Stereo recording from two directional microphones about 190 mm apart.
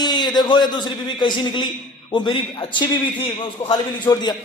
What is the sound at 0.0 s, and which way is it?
A man's voice, 20° left (ahead or behind).